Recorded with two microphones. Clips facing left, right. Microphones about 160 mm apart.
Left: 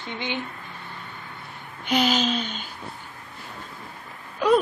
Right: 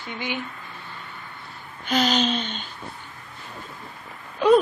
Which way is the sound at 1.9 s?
10° left (ahead or behind).